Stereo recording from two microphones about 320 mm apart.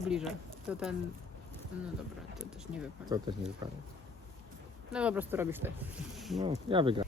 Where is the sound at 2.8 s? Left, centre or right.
Centre.